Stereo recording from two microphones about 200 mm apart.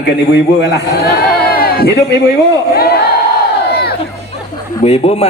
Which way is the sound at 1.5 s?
50° left (ahead or behind).